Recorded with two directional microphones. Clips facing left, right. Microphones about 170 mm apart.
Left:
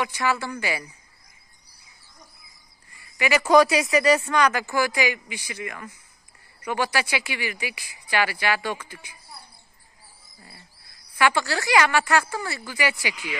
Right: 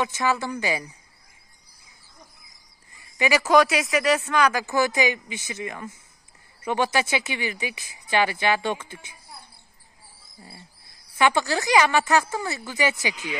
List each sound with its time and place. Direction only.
0.0 s speech: 20° right (ahead or behind)
3.2 s speech: 15° right (ahead or behind)
3.4 s speech: centre (ahead or behind); by 9.4 s 25° right (ahead or behind)
11.1 s speech: 20° right (ahead or behind)